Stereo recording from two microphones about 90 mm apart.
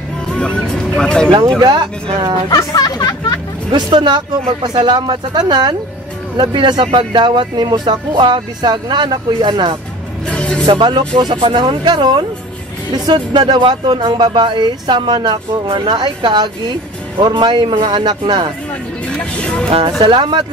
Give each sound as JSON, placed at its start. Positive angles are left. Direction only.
{"t": 0.3, "sound": "music", "side_deg": 10}
{"t": 0.7, "sound": "speech", "side_deg": 10}
{"t": 1.6, "sound": "speech", "side_deg": -55}
{"t": 2.5, "sound": "speech", "side_deg": 45}
{"t": 3.7, "sound": "speech", "side_deg": -55}
{"t": 10.3, "sound": "music", "side_deg": 10}
{"t": 10.7, "sound": "speech", "side_deg": -55}
{"t": 19.0, "sound": "speech", "side_deg": 10}
{"t": 19.7, "sound": "speech", "side_deg": -75}